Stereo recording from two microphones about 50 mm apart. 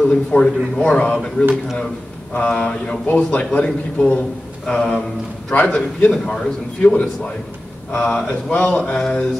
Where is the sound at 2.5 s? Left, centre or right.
Centre.